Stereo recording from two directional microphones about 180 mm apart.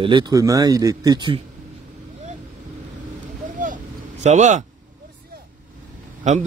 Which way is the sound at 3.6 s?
45° right (ahead or behind).